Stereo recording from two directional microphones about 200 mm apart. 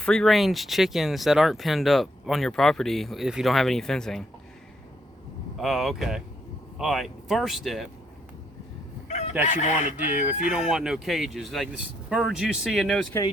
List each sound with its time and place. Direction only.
0.0 s speech: 5° left (ahead or behind)
5.5 s speech: centre (ahead or behind)
9.0 s crowing: 35° left (ahead or behind)
9.4 s speech: 35° left (ahead or behind)
10.2 s speech: 5° right (ahead or behind)